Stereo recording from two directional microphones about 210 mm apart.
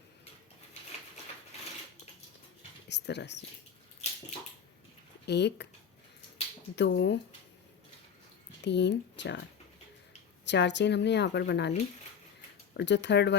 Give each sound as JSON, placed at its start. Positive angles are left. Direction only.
{"t": 2.9, "sound": "a woman's voice", "side_deg": 55}
{"t": 5.2, "sound": "speech", "side_deg": 55}
{"t": 6.7, "sound": "a woman's voice", "side_deg": 55}
{"t": 8.6, "sound": "a woman's voice", "side_deg": 55}
{"t": 10.4, "sound": "a woman's voice", "side_deg": 55}
{"t": 12.7, "sound": "a woman's voice", "side_deg": 55}